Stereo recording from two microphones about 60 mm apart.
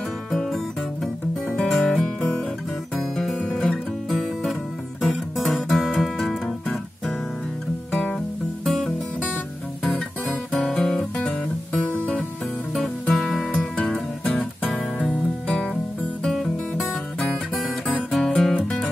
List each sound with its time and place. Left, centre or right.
0.3 s music: centre
1.7 s music: centre
5.0 s music: centre
8.6 s music: centre
12.7 s music: centre
13.4 s music: centre
16.3 s music: centre